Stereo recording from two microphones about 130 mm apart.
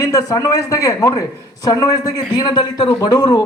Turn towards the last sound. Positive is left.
turn(degrees=35)  # may be behind; listen again after turning